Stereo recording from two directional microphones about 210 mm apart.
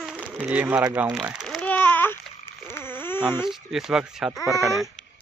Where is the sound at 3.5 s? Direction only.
Centre (ahead or behind).